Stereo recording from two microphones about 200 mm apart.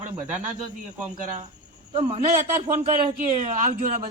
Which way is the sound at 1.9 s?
35° right (ahead or behind).